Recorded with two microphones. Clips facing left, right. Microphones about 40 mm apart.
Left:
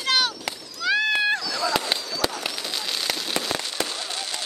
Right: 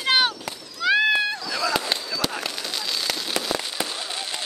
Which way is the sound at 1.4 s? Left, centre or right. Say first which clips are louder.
Right 1 dB; right.